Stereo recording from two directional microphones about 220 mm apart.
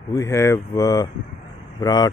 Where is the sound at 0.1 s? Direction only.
15° left (ahead or behind).